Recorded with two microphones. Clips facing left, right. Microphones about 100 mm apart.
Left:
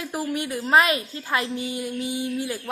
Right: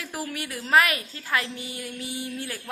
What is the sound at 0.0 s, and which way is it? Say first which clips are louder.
A woman's voice: left 6 dB; 20° left (ahead or behind).